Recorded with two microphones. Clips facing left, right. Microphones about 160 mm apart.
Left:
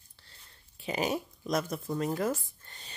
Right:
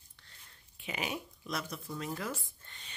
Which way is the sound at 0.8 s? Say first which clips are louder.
Left 7 dB; 35° left (ahead or behind).